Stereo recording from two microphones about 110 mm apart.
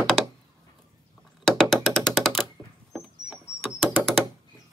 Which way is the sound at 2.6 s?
20° right (ahead or behind).